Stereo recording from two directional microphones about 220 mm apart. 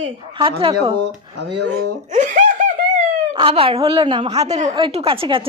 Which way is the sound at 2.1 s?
35° right (ahead or behind).